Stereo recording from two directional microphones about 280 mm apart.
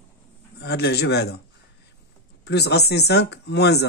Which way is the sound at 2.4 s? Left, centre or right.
Left.